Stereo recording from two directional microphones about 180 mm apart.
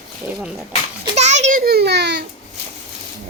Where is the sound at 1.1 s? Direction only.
40° right (ahead or behind).